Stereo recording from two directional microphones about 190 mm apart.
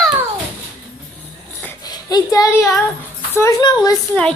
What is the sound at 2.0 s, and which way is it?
A woman's voice, 20° left (ahead or behind).